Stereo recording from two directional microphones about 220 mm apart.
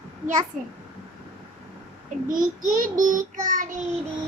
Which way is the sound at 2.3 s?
40° right (ahead or behind).